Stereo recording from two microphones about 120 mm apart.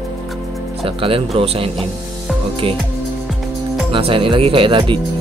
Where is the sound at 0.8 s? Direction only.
50° right (ahead or behind).